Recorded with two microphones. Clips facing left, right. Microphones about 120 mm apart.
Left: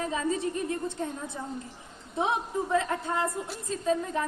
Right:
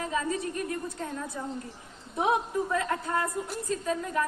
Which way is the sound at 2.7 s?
25° left (ahead or behind).